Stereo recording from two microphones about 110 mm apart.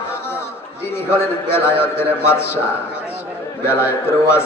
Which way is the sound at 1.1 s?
20° left (ahead or behind).